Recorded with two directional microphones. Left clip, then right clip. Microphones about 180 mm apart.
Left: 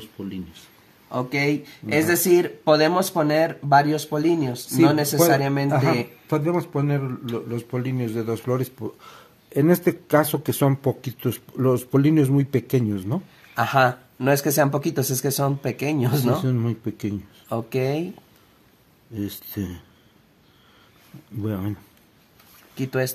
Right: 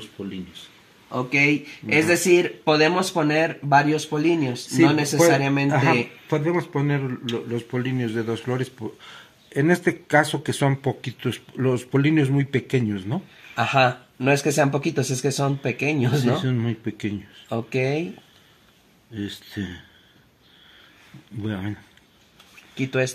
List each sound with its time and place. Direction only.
1.1 s speech: centre (ahead or behind)
6.2 s speech: 45° left (ahead or behind)
13.6 s speech: centre (ahead or behind)
16.4 s speech: 50° left (ahead or behind)
17.5 s speech: centre (ahead or behind)
19.1 s speech: 45° left (ahead or behind)
21.4 s speech: 45° left (ahead or behind)
22.8 s speech: 5° right (ahead or behind)